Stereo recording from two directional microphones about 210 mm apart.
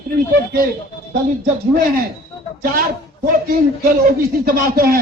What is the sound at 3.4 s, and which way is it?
Speech, 45° right (ahead or behind).